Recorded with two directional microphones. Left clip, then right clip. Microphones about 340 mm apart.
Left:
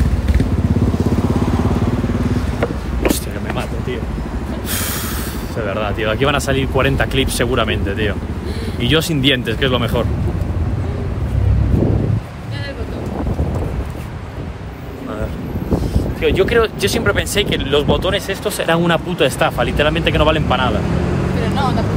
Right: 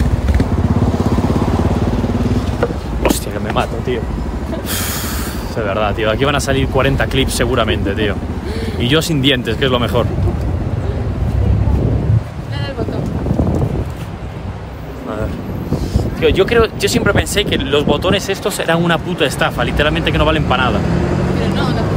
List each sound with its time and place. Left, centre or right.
3.0 s vehicle: centre
5.6 s speech: centre
16.2 s speech: centre
21.4 s vehicle: centre